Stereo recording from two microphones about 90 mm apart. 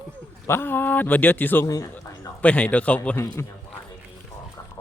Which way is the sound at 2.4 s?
15° left (ahead or behind).